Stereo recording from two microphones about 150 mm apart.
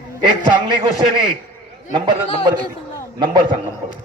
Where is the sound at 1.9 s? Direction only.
30° right (ahead or behind).